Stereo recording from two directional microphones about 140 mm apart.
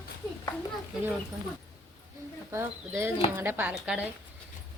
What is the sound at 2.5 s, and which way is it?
Speech, 20° right (ahead or behind).